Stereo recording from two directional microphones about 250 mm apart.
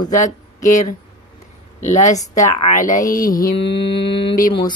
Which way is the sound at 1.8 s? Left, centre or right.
Left.